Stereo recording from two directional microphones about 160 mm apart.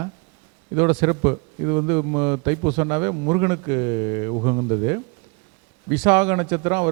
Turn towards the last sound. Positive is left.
turn(degrees=-20)  # may be behind; listen again after turning